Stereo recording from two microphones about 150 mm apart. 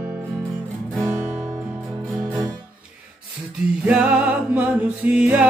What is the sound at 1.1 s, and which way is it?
Music, 15° right (ahead or behind).